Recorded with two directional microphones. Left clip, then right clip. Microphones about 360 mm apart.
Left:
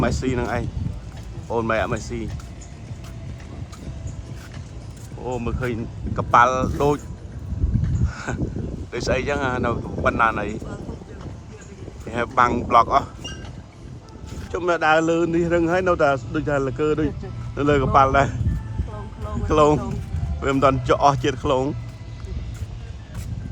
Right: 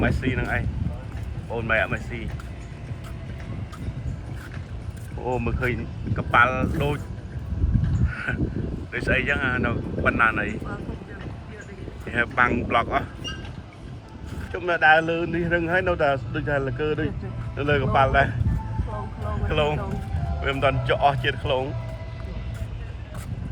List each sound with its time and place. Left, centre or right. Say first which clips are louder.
0.0 s speech: left 2 dB; centre
1.6 s speech: right 3 dB; centre
5.2 s speech: right 1 dB; centre
8.0 s a sound: right 4 dB; centre
8.9 s speech: even; centre
12.0 s speech: left 2 dB; centre
14.5 s speech: even; centre
21.4 s speech: left 5 dB; left